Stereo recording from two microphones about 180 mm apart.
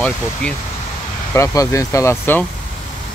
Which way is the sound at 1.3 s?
15° left (ahead or behind).